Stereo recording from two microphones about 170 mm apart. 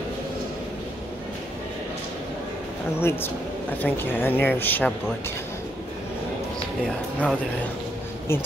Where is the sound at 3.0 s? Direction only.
15° left (ahead or behind).